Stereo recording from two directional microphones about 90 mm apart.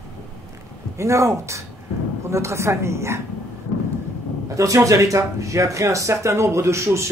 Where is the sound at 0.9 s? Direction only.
30° right (ahead or behind).